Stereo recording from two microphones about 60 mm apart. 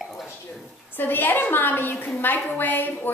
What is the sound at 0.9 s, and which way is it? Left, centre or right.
A woman's voice, left.